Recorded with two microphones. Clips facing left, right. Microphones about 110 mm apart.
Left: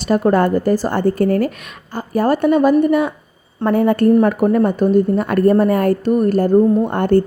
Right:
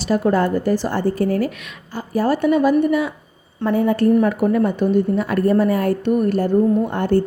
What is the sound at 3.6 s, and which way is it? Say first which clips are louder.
Speech: left 3 dB; 60° left (ahead or behind).